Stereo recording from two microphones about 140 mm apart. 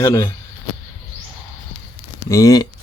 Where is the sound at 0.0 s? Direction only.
20° left (ahead or behind).